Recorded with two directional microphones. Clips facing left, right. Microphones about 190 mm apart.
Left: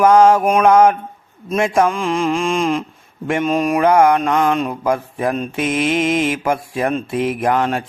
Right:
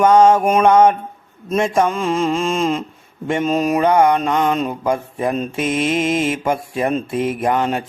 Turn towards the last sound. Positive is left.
turn(degrees=0)  # may be behind; listen again after turning